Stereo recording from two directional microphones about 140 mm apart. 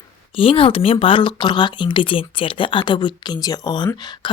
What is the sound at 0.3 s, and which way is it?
Speech, 40° left (ahead or behind).